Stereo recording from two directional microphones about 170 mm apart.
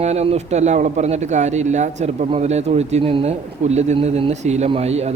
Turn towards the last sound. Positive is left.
turn(degrees=-40)  # may be behind; listen again after turning